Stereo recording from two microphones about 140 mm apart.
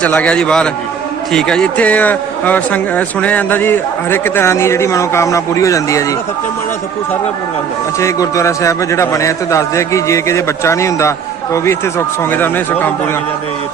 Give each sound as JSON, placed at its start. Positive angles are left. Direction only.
{"t": 0.0, "sound": "a man's voice", "side_deg": 10}
{"t": 7.9, "sound": "a man's voice", "side_deg": 20}